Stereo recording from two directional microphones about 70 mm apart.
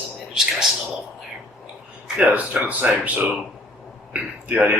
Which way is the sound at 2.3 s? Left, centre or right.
Right.